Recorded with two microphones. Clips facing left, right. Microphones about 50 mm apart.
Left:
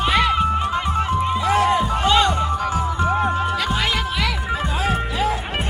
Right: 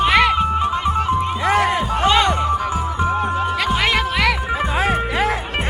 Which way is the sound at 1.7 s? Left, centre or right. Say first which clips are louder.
Right 1 dB; right.